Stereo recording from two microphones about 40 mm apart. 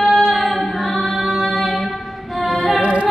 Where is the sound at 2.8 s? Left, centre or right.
Right.